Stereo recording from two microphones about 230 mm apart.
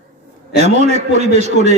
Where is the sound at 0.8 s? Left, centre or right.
Right.